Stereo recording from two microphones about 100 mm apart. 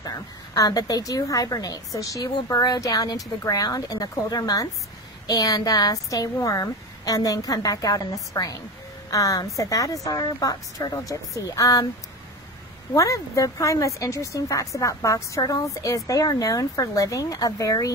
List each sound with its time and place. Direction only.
0.6 s speech: 40° left (ahead or behind)
12.9 s speech: 35° left (ahead or behind)